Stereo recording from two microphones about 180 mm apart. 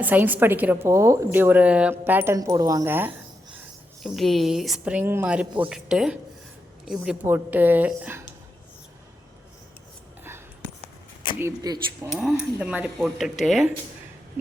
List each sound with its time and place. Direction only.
0.0 s a woman's voice: 10° right (ahead or behind)
4.0 s a woman's voice: centre (ahead or behind)
11.3 s a woman's voice: 15° right (ahead or behind)
12.0 s a woman's voice: 5° right (ahead or behind)